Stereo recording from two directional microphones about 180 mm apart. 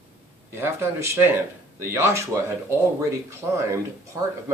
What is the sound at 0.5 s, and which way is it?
Speech, 15° right (ahead or behind).